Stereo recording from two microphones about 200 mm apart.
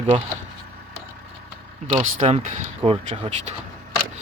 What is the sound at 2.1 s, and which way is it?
Speech, 35° right (ahead or behind).